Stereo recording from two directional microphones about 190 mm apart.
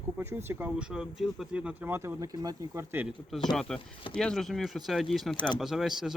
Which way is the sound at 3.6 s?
Centre (ahead or behind).